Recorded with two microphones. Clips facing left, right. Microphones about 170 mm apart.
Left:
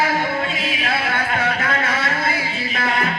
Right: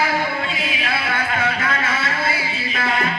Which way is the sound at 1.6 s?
45° left (ahead or behind).